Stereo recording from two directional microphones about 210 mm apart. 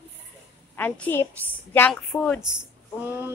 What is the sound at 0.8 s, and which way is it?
A woman's voice, 10° left (ahead or behind).